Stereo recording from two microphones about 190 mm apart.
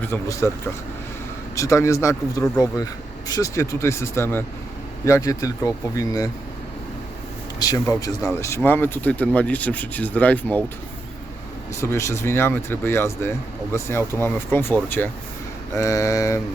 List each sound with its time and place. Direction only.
0.0 s speech: 15° left (ahead or behind)
7.6 s speech: 20° left (ahead or behind)
11.7 s speech: 15° left (ahead or behind)